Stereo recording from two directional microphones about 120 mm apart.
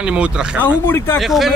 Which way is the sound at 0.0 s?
10° right (ahead or behind).